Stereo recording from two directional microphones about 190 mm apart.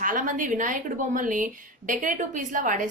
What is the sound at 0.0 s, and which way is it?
A woman's voice, 45° right (ahead or behind).